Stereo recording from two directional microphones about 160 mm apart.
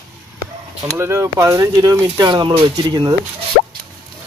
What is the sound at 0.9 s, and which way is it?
Speech, 15° right (ahead or behind).